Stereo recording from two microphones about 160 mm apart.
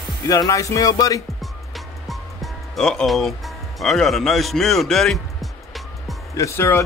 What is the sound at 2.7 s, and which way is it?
Speech, centre (ahead or behind).